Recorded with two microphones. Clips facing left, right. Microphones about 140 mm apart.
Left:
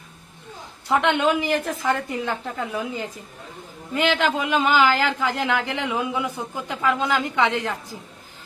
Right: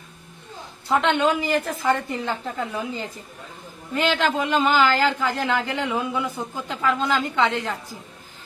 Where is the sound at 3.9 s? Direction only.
10° left (ahead or behind).